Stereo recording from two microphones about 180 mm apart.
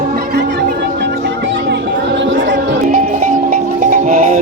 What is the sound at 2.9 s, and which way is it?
Music, 45° right (ahead or behind).